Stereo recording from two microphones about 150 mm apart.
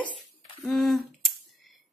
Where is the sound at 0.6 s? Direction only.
Centre (ahead or behind).